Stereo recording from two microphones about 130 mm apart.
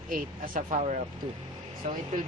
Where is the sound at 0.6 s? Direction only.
65° right (ahead or behind).